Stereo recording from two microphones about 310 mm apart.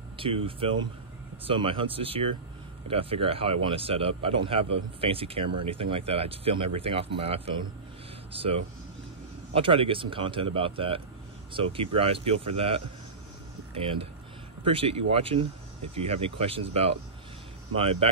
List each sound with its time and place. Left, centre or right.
0.2 s speech: centre
14.6 s speech: centre